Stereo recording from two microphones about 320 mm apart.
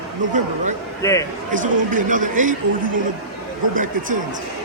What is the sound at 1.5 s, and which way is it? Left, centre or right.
Speech, right.